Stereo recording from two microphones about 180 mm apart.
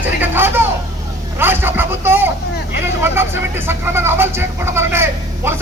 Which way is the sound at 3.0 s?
15° right (ahead or behind).